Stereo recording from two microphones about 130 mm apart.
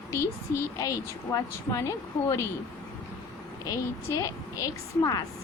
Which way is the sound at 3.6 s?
25° left (ahead or behind).